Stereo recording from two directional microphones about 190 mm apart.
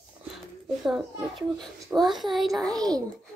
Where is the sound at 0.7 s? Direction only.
Centre (ahead or behind).